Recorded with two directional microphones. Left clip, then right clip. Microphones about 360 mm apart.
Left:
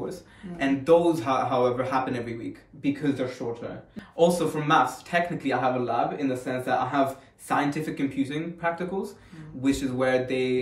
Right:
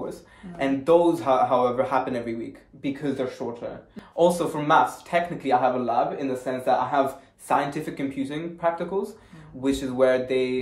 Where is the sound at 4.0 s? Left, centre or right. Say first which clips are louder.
Right 1 dB; centre.